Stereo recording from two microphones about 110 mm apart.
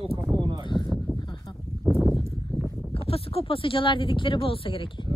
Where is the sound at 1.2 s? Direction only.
45° left (ahead or behind).